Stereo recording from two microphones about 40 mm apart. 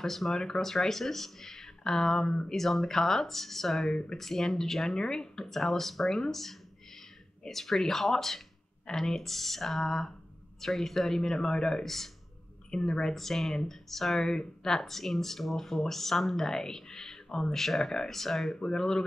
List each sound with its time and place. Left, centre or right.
0.0 s speech: centre
5.4 s speech: centre
11.8 s speech: centre
12.7 s speech: centre